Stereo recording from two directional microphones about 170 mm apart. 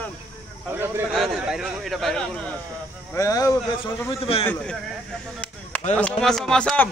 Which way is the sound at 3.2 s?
20° left (ahead or behind).